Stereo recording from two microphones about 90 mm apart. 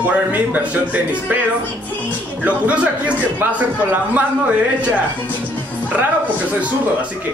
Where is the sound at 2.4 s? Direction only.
15° right (ahead or behind).